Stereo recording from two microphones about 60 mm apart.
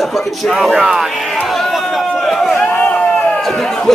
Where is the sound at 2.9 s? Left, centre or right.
Centre.